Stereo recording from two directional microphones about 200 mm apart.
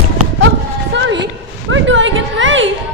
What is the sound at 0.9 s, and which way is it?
Music, 60° right (ahead or behind).